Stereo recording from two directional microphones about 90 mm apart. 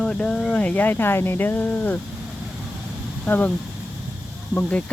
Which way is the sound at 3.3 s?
20° left (ahead or behind).